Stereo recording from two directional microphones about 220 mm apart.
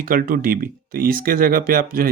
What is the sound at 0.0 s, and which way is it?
Speech, 40° right (ahead or behind).